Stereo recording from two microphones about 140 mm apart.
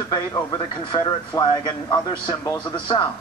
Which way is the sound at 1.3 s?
30° left (ahead or behind).